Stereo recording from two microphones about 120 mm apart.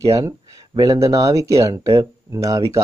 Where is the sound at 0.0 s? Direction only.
25° right (ahead or behind).